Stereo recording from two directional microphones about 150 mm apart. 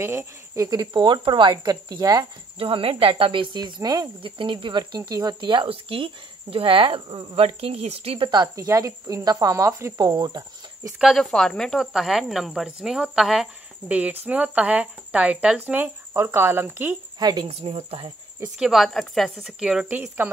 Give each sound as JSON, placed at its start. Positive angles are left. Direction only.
{"t": 0.0, "sound": "speech", "side_deg": -15}
{"t": 2.6, "sound": "speech", "side_deg": -40}
{"t": 8.3, "sound": "speech", "side_deg": -25}
{"t": 11.0, "sound": "speech", "side_deg": 0}
{"t": 17.2, "sound": "speech", "side_deg": -25}
{"t": 17.5, "sound": "speech", "side_deg": -45}
{"t": 18.6, "sound": "speech", "side_deg": 0}